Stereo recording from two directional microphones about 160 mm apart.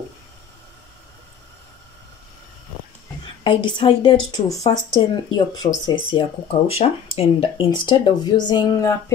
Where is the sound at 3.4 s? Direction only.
30° left (ahead or behind).